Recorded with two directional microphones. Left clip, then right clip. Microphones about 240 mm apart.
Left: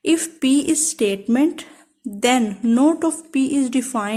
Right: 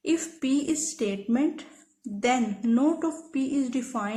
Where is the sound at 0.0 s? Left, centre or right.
Left.